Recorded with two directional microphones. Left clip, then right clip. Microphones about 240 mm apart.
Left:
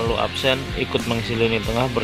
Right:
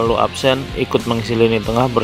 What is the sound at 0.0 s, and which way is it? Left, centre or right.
Speech, right.